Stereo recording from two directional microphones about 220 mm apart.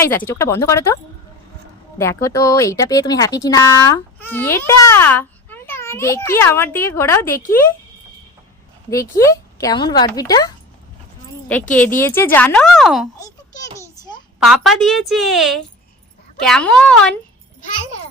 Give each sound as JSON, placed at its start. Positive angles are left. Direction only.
{"t": 0.3, "sound": "speech", "side_deg": 10}
{"t": 2.0, "sound": "speech", "side_deg": 15}
{"t": 8.9, "sound": "speech", "side_deg": 15}
{"t": 11.9, "sound": "speech", "side_deg": 10}
{"t": 13.1, "sound": "a sound", "side_deg": 15}
{"t": 14.3, "sound": "a woman's voice", "side_deg": 0}